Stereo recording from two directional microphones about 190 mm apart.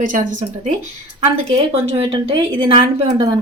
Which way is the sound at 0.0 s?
45° right (ahead or behind).